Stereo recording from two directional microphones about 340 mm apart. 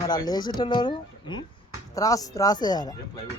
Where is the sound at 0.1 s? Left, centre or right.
Centre.